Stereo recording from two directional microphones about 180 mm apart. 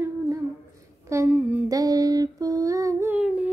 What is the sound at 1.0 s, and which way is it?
Humming, 15° right (ahead or behind).